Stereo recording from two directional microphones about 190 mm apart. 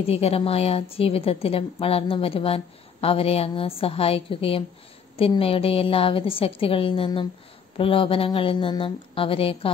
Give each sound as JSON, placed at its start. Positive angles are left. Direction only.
{"t": 0.0, "sound": "a woman's voice", "side_deg": 30}